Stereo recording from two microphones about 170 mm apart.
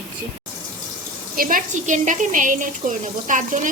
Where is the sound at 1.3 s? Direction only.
55° right (ahead or behind).